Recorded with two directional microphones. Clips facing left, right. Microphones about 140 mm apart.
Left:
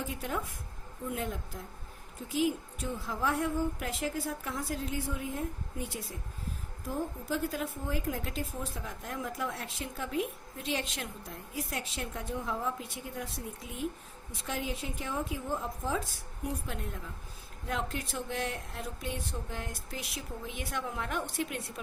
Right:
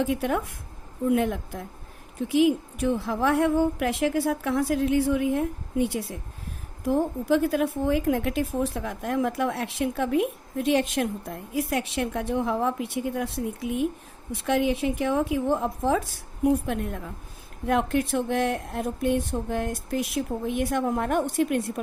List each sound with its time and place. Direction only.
0.0 s a woman's voice: 70° right (ahead or behind); by 21.6 s 50° right (ahead or behind)